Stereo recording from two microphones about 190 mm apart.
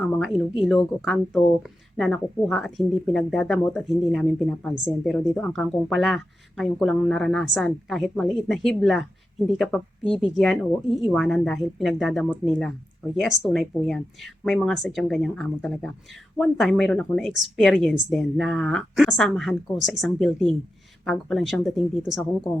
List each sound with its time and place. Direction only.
0.0 s speech: centre (ahead or behind)